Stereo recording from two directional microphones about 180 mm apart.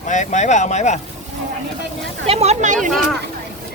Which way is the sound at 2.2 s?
35° right (ahead or behind).